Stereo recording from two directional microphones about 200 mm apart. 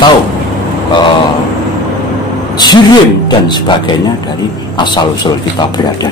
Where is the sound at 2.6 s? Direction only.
20° left (ahead or behind).